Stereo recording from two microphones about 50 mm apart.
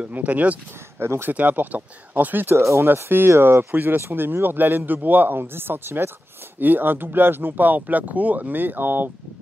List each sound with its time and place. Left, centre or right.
0.1 s speech: right
0.9 s speech: right
1.3 s speech: right
2.5 s speech: right
3.0 s speech: right